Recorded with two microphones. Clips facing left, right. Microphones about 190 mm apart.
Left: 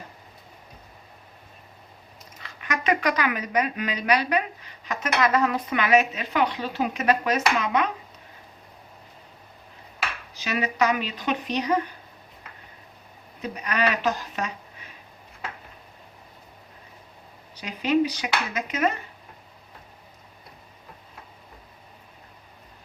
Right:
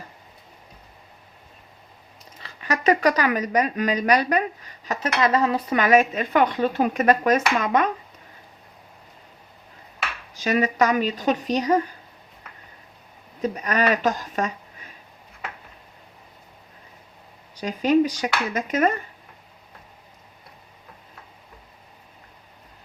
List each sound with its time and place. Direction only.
2.4 s a woman's voice: 35° right (ahead or behind)
10.3 s a woman's voice: 45° right (ahead or behind)
13.4 s a woman's voice: 45° right (ahead or behind)
17.6 s a woman's voice: 45° right (ahead or behind)